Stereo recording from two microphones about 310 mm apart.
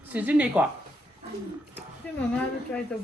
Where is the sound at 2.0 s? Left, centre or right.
Centre.